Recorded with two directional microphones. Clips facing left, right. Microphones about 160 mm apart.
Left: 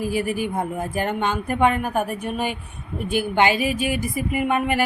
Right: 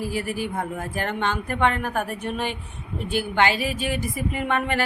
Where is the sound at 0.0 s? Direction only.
15° left (ahead or behind).